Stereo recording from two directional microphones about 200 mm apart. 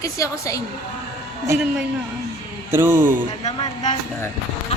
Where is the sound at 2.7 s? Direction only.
10° right (ahead or behind).